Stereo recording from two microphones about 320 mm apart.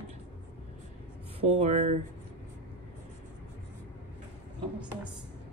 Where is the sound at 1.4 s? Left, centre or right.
Right.